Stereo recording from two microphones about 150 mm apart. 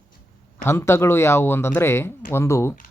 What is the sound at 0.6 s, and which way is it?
Speech, 15° left (ahead or behind).